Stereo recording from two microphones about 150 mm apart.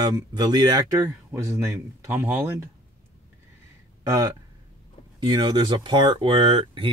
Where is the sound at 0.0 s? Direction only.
25° right (ahead or behind).